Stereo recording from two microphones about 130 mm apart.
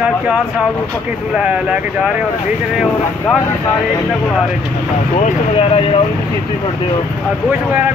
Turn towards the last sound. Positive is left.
turn(degrees=45)  # may be behind; listen again after turning